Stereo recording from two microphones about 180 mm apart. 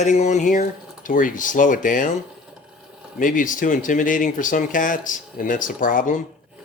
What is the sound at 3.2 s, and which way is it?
Speech, 50° left (ahead or behind).